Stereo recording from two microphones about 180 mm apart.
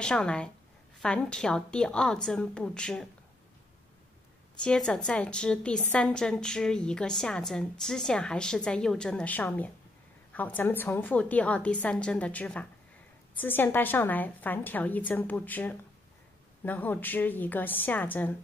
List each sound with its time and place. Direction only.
0.0 s a woman's voice: 5° left (ahead or behind)
4.6 s a woman's voice: 5° left (ahead or behind)